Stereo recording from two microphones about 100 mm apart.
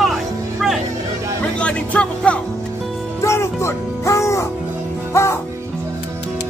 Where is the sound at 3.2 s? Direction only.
30° left (ahead or behind).